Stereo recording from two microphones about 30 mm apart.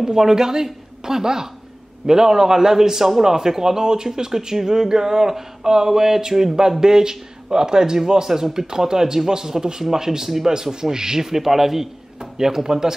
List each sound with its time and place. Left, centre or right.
0.0 s a man's voice: centre